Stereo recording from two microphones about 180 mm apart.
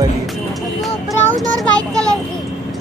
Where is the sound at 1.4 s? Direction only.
5° left (ahead or behind).